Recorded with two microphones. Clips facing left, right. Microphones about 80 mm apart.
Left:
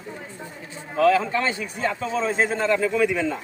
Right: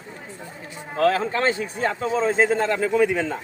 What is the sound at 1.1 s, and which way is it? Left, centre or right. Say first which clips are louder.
A man's voice: even; right.